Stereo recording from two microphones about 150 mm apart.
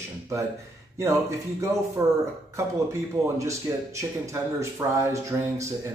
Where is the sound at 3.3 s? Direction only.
20° right (ahead or behind).